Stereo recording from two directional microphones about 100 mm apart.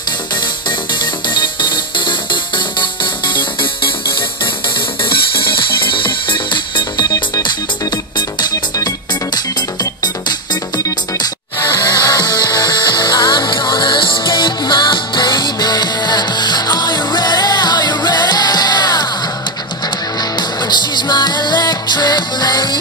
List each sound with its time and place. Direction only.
1.3 s music: 50° left (ahead or behind)
5.1 s music: 60° left (ahead or behind)
10.8 s music: 45° left (ahead or behind)
20.3 s music: 45° left (ahead or behind)